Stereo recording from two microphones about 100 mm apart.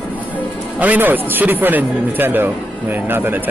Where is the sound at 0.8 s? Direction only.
15° right (ahead or behind).